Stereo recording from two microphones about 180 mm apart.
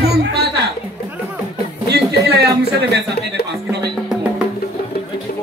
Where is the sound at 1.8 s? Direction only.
65° right (ahead or behind).